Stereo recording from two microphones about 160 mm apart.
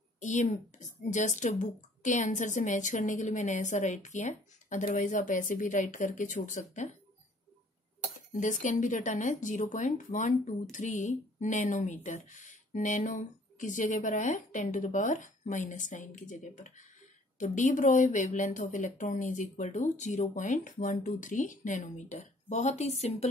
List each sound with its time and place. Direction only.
0.2 s speech: 50° left (ahead or behind)
8.3 s speech: 55° left (ahead or behind)